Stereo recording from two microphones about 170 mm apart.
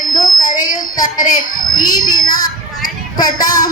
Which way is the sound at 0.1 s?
20° left (ahead or behind).